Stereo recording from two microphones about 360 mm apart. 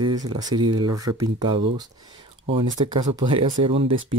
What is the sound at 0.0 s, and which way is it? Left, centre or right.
Speech, right.